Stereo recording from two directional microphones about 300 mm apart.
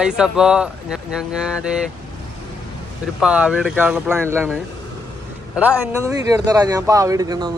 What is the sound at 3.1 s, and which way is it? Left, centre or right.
Speech, centre.